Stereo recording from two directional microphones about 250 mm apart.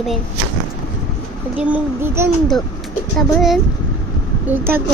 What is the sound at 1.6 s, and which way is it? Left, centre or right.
Speech, centre.